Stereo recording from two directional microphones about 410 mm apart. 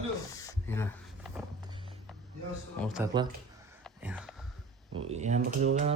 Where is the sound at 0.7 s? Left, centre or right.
Centre.